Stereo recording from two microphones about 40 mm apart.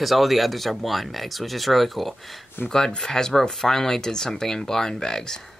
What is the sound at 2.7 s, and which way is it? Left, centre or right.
Speech, centre.